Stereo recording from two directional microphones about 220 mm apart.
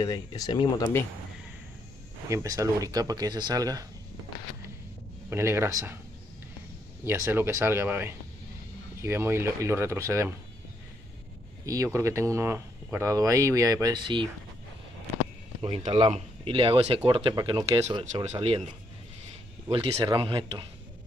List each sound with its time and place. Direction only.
0.0 s speech: 15° left (ahead or behind)
2.2 s speech: 15° right (ahead or behind)
5.3 s speech: 10° right (ahead or behind)
7.1 s speech: 10° right (ahead or behind)
11.6 s speech: 15° right (ahead or behind)
15.6 s speech: 25° right (ahead or behind)
17.8 s speech: 30° right (ahead or behind)
19.7 s speech: 15° right (ahead or behind)